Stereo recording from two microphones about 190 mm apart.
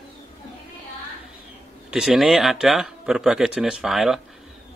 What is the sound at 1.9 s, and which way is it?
Speech, centre (ahead or behind).